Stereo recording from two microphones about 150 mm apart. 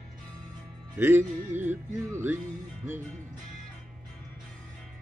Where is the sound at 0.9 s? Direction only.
15° right (ahead or behind).